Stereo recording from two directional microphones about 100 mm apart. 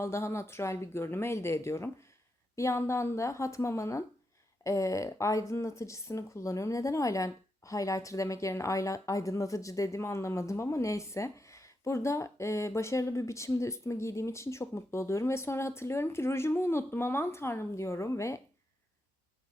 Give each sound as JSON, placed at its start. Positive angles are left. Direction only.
{"t": 0.0, "sound": "a woman's voice", "side_deg": 25}